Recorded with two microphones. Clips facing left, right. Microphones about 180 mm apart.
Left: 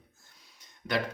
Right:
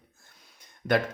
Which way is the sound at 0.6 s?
55° right (ahead or behind).